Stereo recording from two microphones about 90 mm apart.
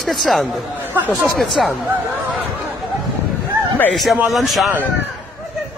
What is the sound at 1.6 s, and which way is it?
Speech, centre (ahead or behind).